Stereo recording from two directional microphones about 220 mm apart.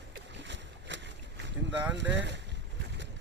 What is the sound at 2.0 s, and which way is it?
Speech, 55° right (ahead or behind).